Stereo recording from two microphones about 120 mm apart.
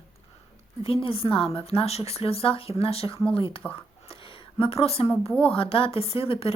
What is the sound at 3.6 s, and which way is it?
Speech, 10° left (ahead or behind).